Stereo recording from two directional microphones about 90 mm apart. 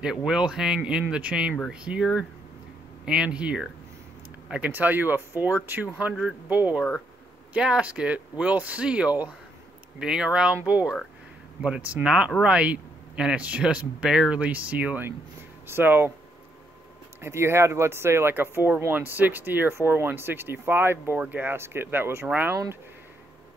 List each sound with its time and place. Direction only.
0.0 s speech: 10° right (ahead or behind); by 16.1 s 25° right (ahead or behind)
17.2 s speech: 30° right (ahead or behind)